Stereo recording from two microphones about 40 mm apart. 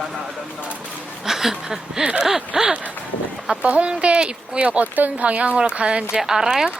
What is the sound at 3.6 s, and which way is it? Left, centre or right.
Speech, right.